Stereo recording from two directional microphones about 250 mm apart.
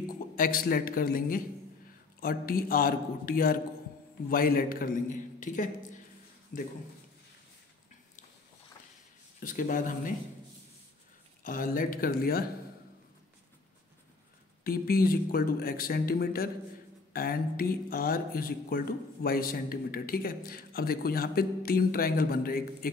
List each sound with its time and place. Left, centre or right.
0.0 s speech: left
9.4 s speech: left
11.4 s speech: left
14.6 s speech: left